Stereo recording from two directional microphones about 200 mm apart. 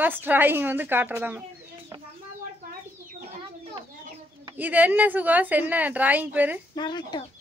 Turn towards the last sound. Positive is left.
turn(degrees=20)  # may be behind; listen again after turning